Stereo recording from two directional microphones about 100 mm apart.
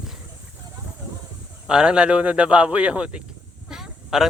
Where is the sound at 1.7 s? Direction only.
10° right (ahead or behind).